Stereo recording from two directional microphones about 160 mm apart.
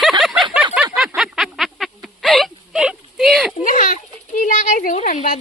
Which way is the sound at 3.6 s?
55° left (ahead or behind).